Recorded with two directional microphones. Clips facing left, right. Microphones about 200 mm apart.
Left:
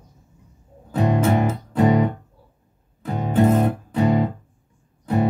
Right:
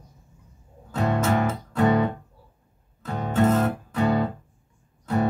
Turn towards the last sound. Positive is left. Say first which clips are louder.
# left 3 dB
turn(degrees=15)  # may be behind; listen again after turning